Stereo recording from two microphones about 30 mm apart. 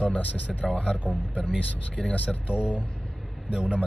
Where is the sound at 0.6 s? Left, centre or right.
Left.